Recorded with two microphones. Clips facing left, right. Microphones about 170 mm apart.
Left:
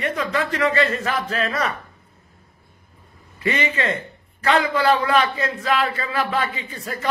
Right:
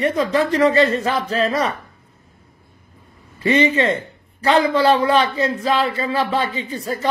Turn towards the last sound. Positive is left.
turn(degrees=-30)  # may be behind; listen again after turning